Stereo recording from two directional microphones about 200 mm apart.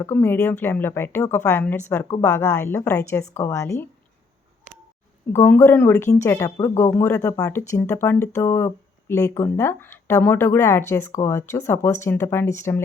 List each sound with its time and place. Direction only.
0.0 s speech: 10° left (ahead or behind)
4.7 s a sound: 40° right (ahead or behind)
5.3 s speech: 10° left (ahead or behind)